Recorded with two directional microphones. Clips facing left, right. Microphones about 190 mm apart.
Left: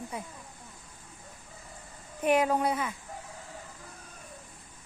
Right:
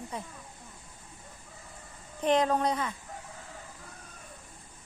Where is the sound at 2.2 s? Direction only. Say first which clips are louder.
Even; 10° left (ahead or behind).